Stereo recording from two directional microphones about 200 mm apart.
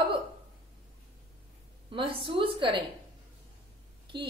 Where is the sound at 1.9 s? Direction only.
25° right (ahead or behind).